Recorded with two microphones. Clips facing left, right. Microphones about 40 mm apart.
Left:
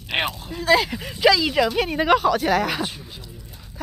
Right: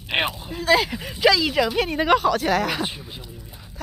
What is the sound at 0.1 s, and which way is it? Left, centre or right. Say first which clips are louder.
Speech: right 1 dB; centre.